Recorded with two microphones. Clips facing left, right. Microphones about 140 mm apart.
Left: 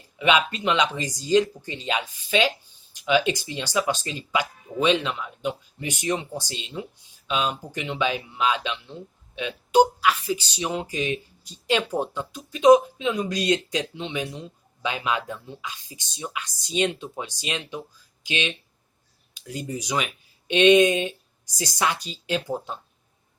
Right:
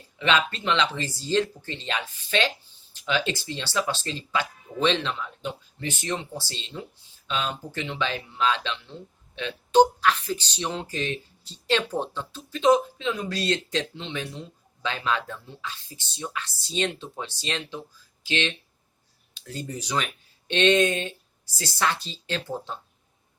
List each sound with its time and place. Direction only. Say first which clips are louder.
0.2 s speech: left 3 dB; 10° left (ahead or behind)